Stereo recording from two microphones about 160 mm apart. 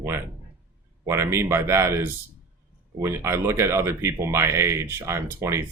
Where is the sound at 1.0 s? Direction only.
15° right (ahead or behind).